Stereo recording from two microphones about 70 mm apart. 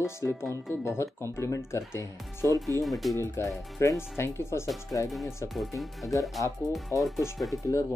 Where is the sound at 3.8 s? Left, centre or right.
Left.